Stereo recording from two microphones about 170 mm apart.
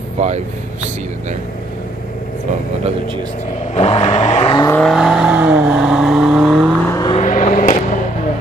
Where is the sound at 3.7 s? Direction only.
35° left (ahead or behind).